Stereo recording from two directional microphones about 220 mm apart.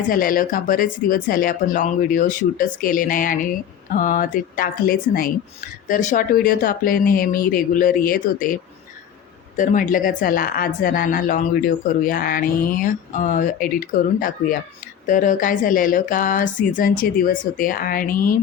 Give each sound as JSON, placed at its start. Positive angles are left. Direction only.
{"t": 0.1, "sound": "speech", "side_deg": 40}
{"t": 9.6, "sound": "speech", "side_deg": 35}